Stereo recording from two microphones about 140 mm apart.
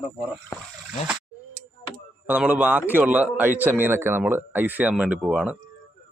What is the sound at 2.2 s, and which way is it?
A man's voice, 10° right (ahead or behind).